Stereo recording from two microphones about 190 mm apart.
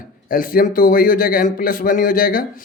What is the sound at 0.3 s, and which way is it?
A man's voice, 45° left (ahead or behind).